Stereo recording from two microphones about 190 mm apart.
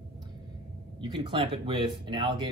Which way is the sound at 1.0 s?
25° right (ahead or behind).